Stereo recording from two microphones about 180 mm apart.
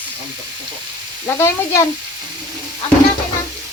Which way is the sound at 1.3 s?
15° left (ahead or behind).